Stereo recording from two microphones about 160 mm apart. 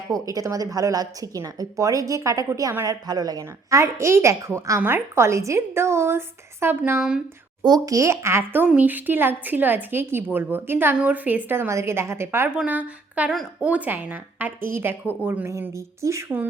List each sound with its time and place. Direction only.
0.1 s a woman's voice: 20° right (ahead or behind)